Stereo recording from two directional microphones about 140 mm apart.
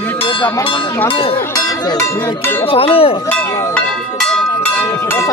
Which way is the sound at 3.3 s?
5° left (ahead or behind).